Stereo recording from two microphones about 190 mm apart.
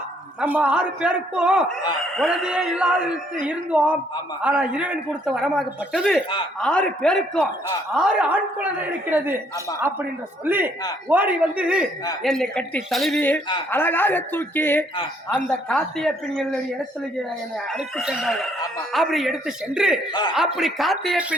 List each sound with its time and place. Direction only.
0.3 s a man's voice: 10° right (ahead or behind)
10.4 s a man's voice: 10° right (ahead or behind)
17.7 s speech: centre (ahead or behind)